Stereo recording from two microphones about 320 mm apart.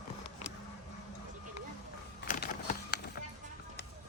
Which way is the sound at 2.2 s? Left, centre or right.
Left.